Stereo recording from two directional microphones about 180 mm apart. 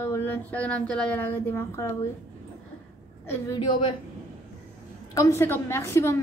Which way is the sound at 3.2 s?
15° left (ahead or behind).